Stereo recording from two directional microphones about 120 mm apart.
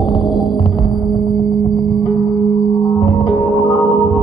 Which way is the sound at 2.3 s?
Centre (ahead or behind).